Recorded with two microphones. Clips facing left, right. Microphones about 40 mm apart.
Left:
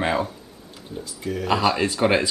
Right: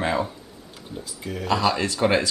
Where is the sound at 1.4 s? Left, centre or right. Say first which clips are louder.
Left 1 dB; centre.